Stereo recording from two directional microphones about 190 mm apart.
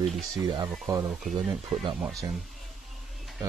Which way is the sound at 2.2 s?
20° right (ahead or behind).